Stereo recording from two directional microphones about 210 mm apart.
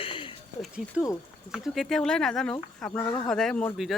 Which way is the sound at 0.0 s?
25° left (ahead or behind).